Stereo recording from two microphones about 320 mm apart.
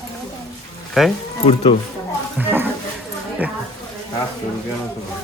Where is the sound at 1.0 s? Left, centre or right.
Centre.